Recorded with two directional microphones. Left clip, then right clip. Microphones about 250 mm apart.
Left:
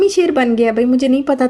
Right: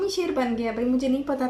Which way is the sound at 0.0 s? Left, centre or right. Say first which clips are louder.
Left 12 dB; left.